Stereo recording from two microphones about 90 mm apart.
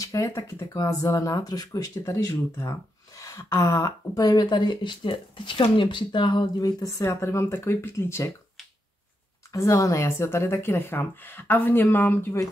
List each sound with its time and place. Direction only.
0.0 s speech: 35° left (ahead or behind)
2.0 s speech: 35° left (ahead or behind); by 6.5 s 60° left (ahead or behind)
6.6 s speech: 40° left (ahead or behind)
9.5 s speech: 35° left (ahead or behind)